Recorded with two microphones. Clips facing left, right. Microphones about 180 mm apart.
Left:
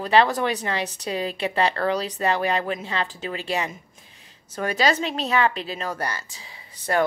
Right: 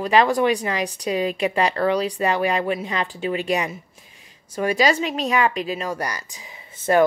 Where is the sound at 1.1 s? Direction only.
35° left (ahead or behind).